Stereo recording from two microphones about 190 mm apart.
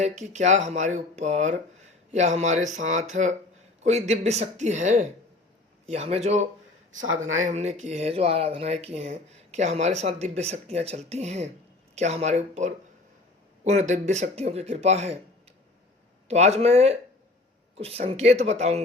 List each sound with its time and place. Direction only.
0.0 s speech: 35° right (ahead or behind)
6.9 s speech: 90° right
7.3 s speech: 40° right (ahead or behind)
16.3 s speech: 35° right (ahead or behind)